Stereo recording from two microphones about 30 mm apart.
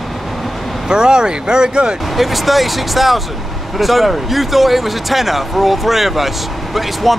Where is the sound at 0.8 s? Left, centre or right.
Right.